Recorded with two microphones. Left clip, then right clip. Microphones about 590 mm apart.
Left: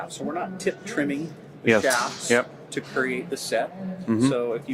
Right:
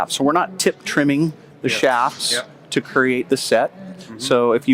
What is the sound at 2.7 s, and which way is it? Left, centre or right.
Speech, right.